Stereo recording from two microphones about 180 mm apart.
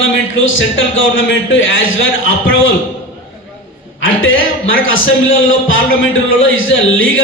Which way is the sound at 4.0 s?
90° left.